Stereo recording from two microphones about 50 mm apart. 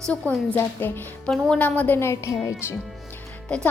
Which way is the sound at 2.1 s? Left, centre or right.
Left.